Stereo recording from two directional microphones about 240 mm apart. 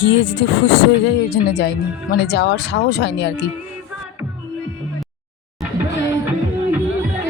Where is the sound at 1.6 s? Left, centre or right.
Left.